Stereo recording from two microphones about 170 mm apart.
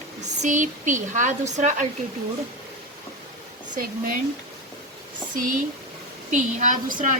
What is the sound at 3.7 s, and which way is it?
Speech, 55° right (ahead or behind).